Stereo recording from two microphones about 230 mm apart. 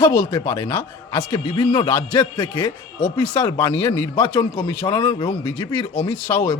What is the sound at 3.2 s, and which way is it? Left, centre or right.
A man's voice, centre.